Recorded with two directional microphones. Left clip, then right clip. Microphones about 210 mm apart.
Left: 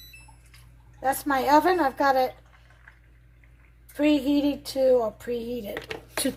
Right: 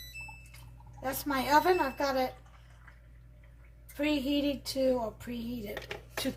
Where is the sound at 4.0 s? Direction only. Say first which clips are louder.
Left 8 dB; 45° left (ahead or behind).